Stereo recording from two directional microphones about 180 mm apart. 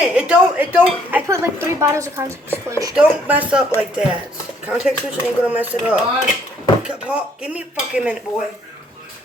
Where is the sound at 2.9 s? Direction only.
5° right (ahead or behind).